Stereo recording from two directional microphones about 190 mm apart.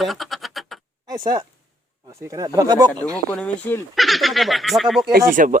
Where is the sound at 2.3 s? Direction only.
20° right (ahead or behind).